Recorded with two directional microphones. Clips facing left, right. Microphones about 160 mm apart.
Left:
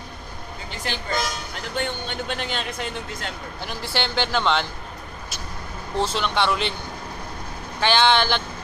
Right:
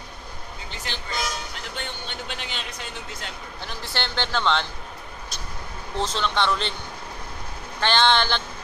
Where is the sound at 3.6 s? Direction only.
10° left (ahead or behind).